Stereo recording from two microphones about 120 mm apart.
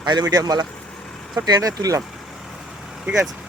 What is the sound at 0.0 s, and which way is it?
Speech, 35° right (ahead or behind).